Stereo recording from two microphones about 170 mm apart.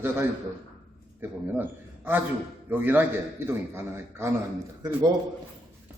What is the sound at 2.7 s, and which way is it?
A man's voice, 10° right (ahead or behind).